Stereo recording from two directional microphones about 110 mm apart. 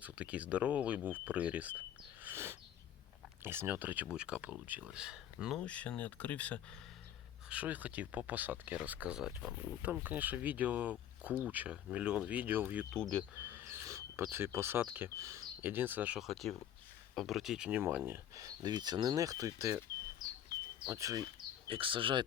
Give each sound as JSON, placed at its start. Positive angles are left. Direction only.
{"t": 0.0, "sound": "speech", "side_deg": -10}
{"t": 2.2, "sound": "a sound", "side_deg": -20}
{"t": 3.4, "sound": "speech", "side_deg": -20}
{"t": 5.5, "sound": "speech", "side_deg": 10}
{"t": 7.5, "sound": "speech", "side_deg": -15}
{"t": 12.9, "sound": "speech", "side_deg": 10}
{"t": 13.4, "sound": "speech", "side_deg": -20}
{"t": 16.2, "sound": "speech", "side_deg": 0}
{"t": 18.3, "sound": "speech", "side_deg": -35}
{"t": 20.9, "sound": "speech", "side_deg": -30}
{"t": 21.7, "sound": "speech", "side_deg": -55}